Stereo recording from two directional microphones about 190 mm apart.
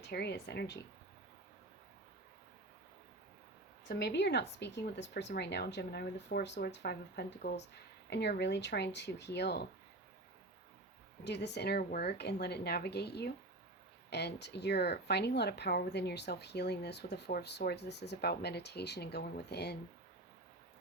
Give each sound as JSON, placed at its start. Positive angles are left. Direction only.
{"t": 0.0, "sound": "speech", "side_deg": 60}
{"t": 3.8, "sound": "speech", "side_deg": 60}
{"t": 11.2, "sound": "speech", "side_deg": 65}